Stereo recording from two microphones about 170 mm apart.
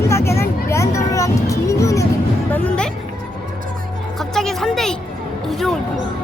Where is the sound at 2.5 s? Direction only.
5° left (ahead or behind).